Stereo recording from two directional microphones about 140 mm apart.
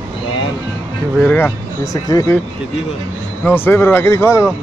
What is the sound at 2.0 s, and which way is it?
Speech, 25° left (ahead or behind).